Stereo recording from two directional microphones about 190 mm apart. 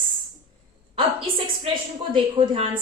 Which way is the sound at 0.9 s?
25° right (ahead or behind).